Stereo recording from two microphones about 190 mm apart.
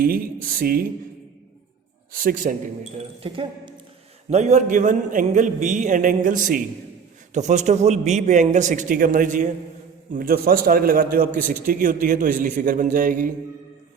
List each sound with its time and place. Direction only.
0.0 s a man's voice: 50° right (ahead or behind)
2.2 s a man's voice: 45° right (ahead or behind)
3.2 s a man's voice: 30° right (ahead or behind); by 13.3 s 45° right (ahead or behind)